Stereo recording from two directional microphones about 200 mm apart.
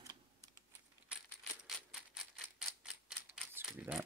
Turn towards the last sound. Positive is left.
turn(degrees=-5)  # may be behind; listen again after turning